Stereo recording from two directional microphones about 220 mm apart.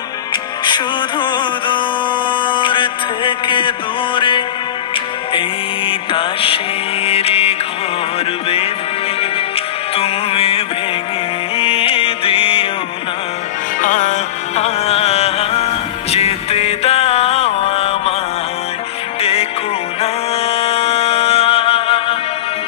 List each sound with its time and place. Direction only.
0.7 s music: 20° left (ahead or behind)
5.9 s music: 25° left (ahead or behind)
7.1 s mantra: 25° left (ahead or behind)
9.9 s music: 25° left (ahead or behind)
13.7 s music: 35° left (ahead or behind)
20.0 s music: 25° left (ahead or behind)